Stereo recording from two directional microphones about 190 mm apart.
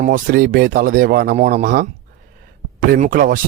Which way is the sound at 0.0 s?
45° right (ahead or behind).